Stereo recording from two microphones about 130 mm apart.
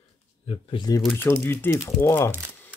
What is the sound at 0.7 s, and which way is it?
Speech, 35° left (ahead or behind).